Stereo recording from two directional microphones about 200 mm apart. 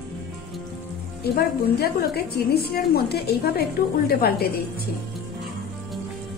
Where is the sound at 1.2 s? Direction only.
50° left (ahead or behind).